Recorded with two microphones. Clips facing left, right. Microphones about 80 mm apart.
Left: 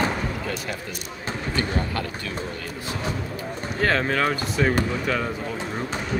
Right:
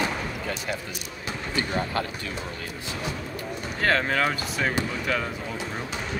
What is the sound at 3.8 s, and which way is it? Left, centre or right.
Speech, centre.